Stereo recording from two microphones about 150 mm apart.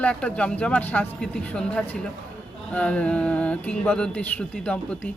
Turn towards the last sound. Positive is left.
turn(degrees=10)  # may be behind; listen again after turning